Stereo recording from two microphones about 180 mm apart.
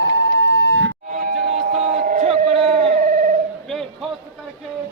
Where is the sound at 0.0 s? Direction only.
90° right.